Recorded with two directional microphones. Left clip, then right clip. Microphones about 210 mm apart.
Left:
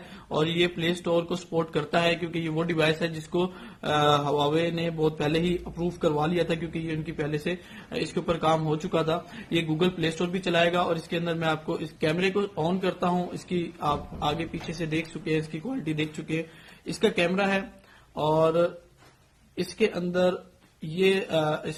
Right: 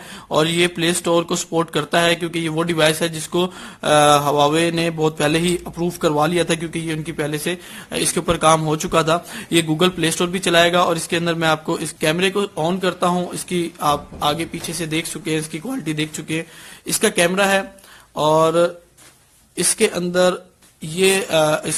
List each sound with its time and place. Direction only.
0.3 s speech: 30° right (ahead or behind)